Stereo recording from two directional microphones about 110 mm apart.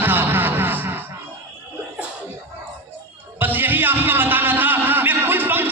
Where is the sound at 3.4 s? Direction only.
15° right (ahead or behind).